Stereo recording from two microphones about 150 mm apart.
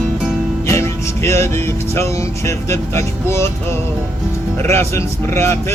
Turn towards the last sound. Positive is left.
turn(degrees=20)  # may be behind; listen again after turning